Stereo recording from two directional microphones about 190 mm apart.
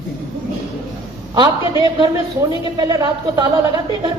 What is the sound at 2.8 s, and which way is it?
Speech, 20° right (ahead or behind).